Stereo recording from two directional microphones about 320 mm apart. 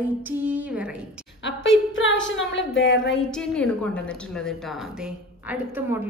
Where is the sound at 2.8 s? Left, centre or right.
Left.